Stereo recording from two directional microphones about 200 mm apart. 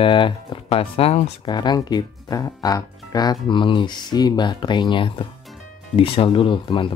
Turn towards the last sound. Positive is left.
turn(degrees=25)  # may be behind; listen again after turning